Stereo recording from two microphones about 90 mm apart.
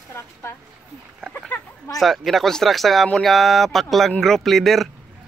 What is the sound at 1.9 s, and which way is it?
Speech, centre (ahead or behind).